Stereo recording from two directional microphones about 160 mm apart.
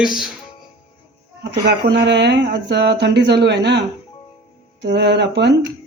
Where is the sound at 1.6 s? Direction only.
90° right.